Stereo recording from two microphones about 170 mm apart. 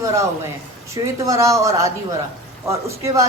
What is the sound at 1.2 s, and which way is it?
A man's voice, 20° right (ahead or behind).